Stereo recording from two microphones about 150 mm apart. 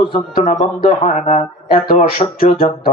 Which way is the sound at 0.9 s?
45° left (ahead or behind).